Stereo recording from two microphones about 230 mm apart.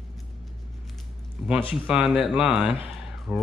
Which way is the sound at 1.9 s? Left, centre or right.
Centre.